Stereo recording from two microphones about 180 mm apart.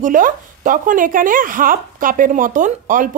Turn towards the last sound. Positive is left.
turn(degrees=-45)  # may be behind; listen again after turning